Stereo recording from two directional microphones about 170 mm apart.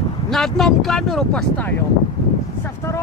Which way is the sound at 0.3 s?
Centre (ahead or behind).